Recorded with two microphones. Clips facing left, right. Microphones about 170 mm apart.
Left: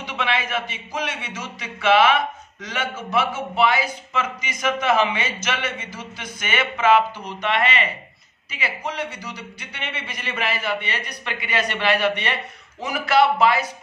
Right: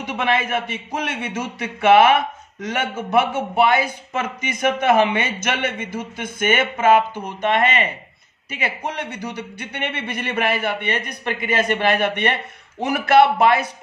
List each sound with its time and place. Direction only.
0.0 s a man's voice: 50° right (ahead or behind)